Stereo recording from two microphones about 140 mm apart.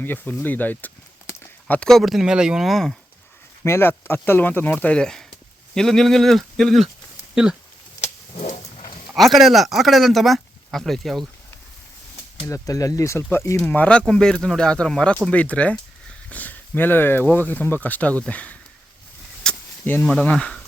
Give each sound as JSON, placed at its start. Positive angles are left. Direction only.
{"t": 0.0, "sound": "speech", "side_deg": 15}
{"t": 3.6, "sound": "speech", "side_deg": 15}
{"t": 8.0, "sound": "vehicle", "side_deg": 50}
{"t": 9.1, "sound": "speech", "side_deg": 0}
{"t": 12.5, "sound": "speech", "side_deg": 20}
{"t": 13.6, "sound": "speech", "side_deg": 10}
{"t": 19.4, "sound": "a sound", "side_deg": 10}
{"t": 20.1, "sound": "speech", "side_deg": 5}